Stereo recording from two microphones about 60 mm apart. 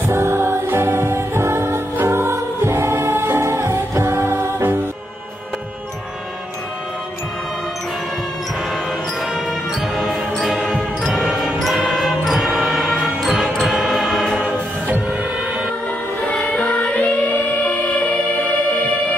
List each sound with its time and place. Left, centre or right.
0.0 s music: right
9.9 s jingle bell: centre
10.6 s music: centre
12.5 s music: centre
16.3 s music: left